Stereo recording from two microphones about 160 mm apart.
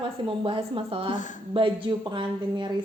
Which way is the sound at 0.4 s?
35° right (ahead or behind).